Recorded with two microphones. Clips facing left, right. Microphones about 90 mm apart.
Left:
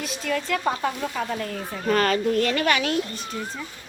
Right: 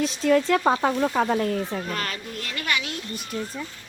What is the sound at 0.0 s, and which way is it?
Speech, 30° right (ahead or behind).